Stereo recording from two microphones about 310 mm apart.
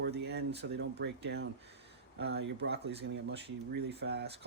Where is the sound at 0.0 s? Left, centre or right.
Right.